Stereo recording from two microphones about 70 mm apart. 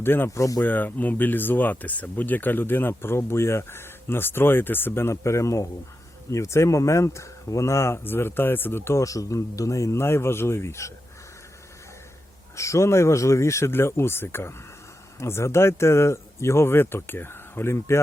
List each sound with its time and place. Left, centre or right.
0.0 s speech: left
0.3 s speech: left
0.6 s speech: left
9.0 s speech: left
12.5 s speech: left